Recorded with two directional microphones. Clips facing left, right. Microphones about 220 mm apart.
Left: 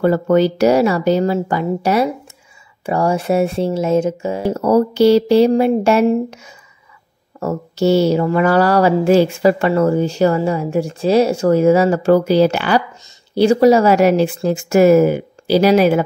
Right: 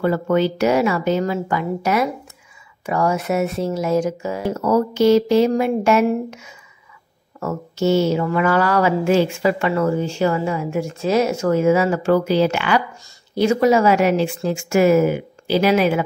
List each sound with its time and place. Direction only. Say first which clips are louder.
0.0 s speech: left 4 dB; 40° left (ahead or behind)